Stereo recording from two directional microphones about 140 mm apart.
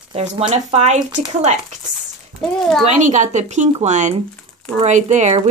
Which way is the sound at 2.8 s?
60° right (ahead or behind).